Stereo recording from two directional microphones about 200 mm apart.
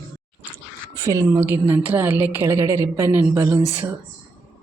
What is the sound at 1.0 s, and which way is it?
A woman's voice, 15° right (ahead or behind).